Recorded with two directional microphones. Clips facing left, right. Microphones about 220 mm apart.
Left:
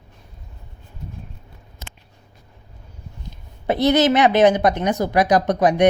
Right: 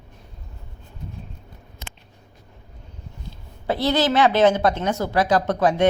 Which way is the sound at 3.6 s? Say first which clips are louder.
Left 4 dB; 20° left (ahead or behind).